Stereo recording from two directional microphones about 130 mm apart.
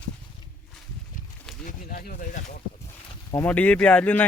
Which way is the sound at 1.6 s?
90° left.